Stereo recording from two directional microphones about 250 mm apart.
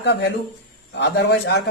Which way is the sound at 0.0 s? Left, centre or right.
Left.